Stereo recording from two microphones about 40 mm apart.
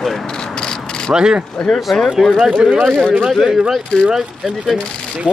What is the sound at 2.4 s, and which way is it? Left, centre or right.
Speech, centre.